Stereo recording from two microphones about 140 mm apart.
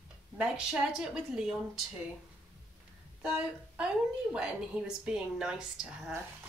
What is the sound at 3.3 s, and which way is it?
A woman's voice, 5° right (ahead or behind).